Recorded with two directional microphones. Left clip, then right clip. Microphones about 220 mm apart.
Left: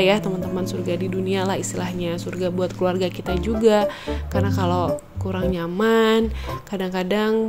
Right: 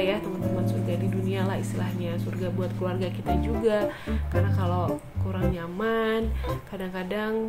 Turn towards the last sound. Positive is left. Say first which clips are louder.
# left 8 dB
turn(degrees=40)  # may be behind; listen again after turning